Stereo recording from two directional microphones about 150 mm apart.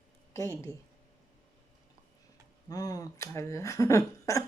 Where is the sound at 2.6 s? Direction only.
25° left (ahead or behind).